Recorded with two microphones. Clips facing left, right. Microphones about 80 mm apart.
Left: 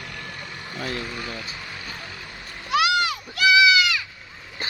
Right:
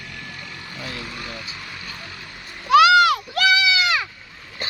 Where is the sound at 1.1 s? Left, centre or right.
Centre.